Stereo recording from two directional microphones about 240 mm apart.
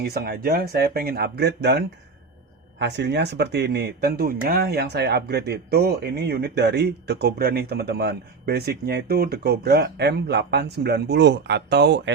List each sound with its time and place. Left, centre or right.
0.0 s speech: right